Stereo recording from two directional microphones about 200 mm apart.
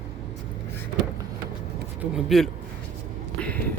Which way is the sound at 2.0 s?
Centre (ahead or behind).